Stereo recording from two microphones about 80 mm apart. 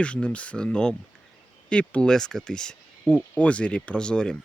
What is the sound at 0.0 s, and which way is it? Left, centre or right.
Speech, centre.